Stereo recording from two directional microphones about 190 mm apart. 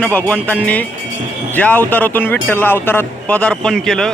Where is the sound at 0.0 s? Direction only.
10° left (ahead or behind).